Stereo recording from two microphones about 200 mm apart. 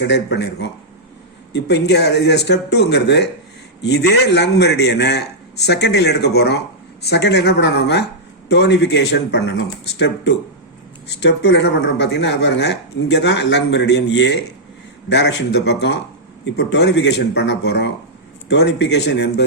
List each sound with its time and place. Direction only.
0.0 s speech: 60° left (ahead or behind)